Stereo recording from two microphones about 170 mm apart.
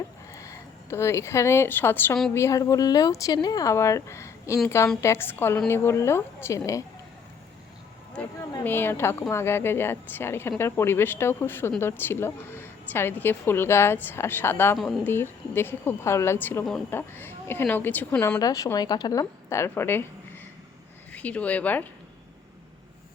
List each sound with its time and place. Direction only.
0.3 s a woman's voice: 20° left (ahead or behind)
8.2 s a woman's voice: 5° left (ahead or behind)
14.8 s speech: centre (ahead or behind)
15.0 s a woman's voice: 15° left (ahead or behind)
18.3 s a woman's voice: 20° left (ahead or behind)
21.1 s speech: 10° left (ahead or behind)